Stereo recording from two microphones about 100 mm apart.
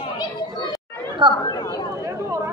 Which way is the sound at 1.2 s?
50° right (ahead or behind).